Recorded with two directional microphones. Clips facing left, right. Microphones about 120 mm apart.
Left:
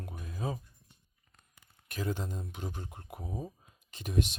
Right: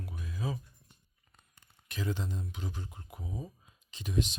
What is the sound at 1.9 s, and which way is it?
Speech, 45° left (ahead or behind).